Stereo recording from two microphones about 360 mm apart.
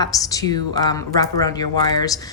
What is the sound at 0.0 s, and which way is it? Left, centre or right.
Speech, centre.